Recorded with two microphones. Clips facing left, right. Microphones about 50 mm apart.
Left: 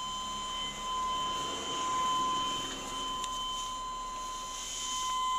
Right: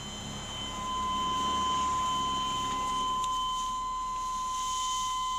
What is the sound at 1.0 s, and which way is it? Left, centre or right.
Vehicle, centre.